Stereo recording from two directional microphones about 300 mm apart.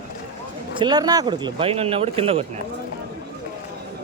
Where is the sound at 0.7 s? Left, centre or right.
Centre.